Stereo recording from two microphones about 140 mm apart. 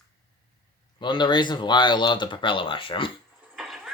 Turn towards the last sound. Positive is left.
turn(degrees=0)  # may be behind; listen again after turning